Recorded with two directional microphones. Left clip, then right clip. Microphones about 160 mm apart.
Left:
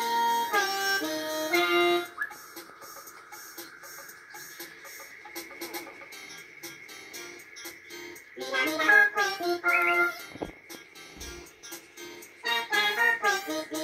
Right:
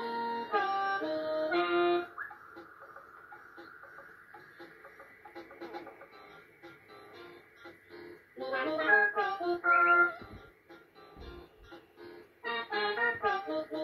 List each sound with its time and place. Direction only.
0.1 s music: 35° left (ahead or behind)
0.5 s harmonica: 15° left (ahead or behind)
1.1 s music: 50° left (ahead or behind)
1.5 s music: 15° left (ahead or behind)
8.4 s music: 15° left (ahead or behind)
12.4 s music: 20° left (ahead or behind)